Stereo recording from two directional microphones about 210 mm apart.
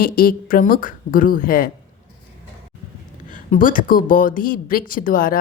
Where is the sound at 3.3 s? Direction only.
40° left (ahead or behind).